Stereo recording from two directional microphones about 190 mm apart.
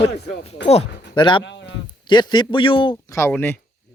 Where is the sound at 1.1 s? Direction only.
25° left (ahead or behind).